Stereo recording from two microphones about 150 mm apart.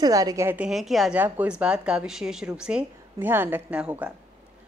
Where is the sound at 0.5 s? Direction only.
5° right (ahead or behind).